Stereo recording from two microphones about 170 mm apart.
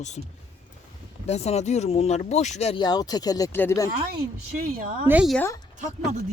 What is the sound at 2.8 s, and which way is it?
Speech, 25° left (ahead or behind).